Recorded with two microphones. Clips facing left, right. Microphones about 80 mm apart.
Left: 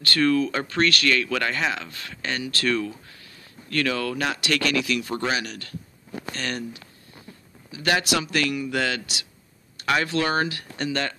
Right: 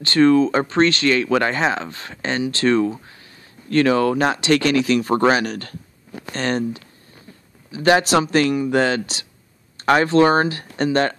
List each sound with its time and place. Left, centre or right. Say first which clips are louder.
0.0 s speech: right 7 dB; right